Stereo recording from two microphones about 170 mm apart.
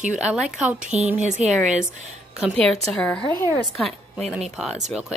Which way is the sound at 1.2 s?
45° right (ahead or behind).